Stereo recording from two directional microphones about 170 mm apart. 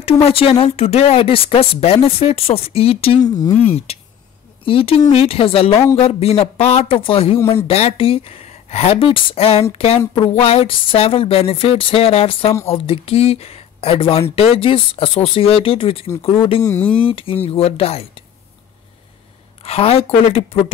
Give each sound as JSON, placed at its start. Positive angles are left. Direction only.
{"t": 0.0, "sound": "speech", "side_deg": 35}
{"t": 3.2, "sound": "speech", "side_deg": 20}
{"t": 3.6, "sound": "speech", "side_deg": 35}
{"t": 16.6, "sound": "speech", "side_deg": 10}
{"t": 17.0, "sound": "speech", "side_deg": 30}
{"t": 19.6, "sound": "speech", "side_deg": 35}